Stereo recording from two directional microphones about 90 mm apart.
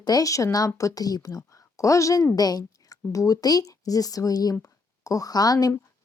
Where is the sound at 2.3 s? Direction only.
45° left (ahead or behind).